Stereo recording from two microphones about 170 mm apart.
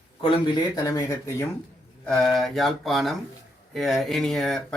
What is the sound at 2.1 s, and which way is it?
Speech, 5° left (ahead or behind).